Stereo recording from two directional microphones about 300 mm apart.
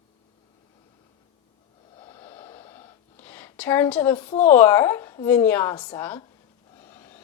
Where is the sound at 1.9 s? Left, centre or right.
Centre.